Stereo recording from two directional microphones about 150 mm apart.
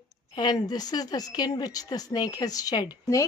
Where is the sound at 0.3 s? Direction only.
30° left (ahead or behind).